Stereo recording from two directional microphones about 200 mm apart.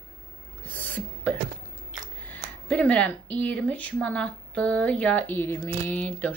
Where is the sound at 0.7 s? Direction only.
10° left (ahead or behind).